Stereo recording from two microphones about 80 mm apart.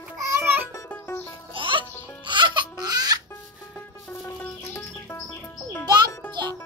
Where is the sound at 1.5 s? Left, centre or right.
Right.